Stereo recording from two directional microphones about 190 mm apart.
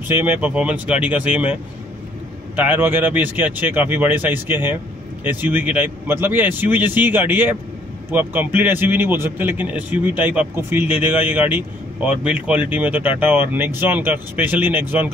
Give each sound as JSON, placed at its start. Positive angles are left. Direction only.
{"t": 0.1, "sound": "a man's voice", "side_deg": -10}